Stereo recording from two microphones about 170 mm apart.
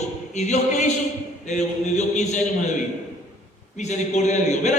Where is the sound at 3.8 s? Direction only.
40° left (ahead or behind).